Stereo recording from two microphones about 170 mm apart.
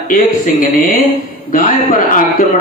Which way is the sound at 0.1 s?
50° left (ahead or behind).